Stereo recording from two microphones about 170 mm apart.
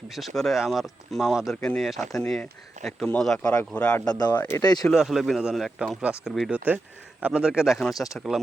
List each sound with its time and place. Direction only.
0.1 s speech: centre (ahead or behind)
4.0 s speech: 20° left (ahead or behind)
4.9 s speech: centre (ahead or behind)